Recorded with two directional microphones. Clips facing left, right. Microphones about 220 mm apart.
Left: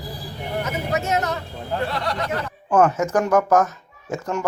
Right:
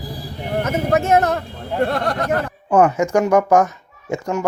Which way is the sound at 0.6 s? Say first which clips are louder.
Right 7 dB; 50° right (ahead or behind).